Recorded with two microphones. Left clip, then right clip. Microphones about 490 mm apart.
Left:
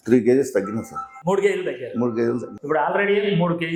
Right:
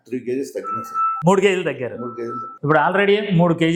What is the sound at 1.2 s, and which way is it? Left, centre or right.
A man's voice, right.